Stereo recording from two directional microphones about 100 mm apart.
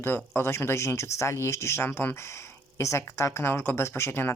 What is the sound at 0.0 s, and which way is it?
Speech, 20° left (ahead or behind).